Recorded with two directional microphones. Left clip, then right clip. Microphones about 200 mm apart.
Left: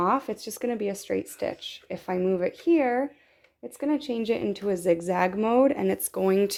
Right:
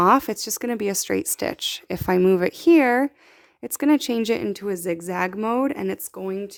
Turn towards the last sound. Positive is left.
turn(degrees=10)  # may be behind; listen again after turning